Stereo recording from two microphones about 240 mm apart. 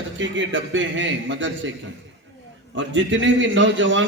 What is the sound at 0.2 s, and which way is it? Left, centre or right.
A man's voice, right.